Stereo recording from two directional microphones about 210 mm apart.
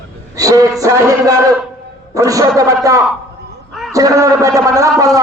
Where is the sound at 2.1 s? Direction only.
15° right (ahead or behind).